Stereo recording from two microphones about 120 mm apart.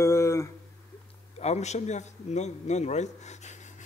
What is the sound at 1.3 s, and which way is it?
A man's voice, 65° left (ahead or behind).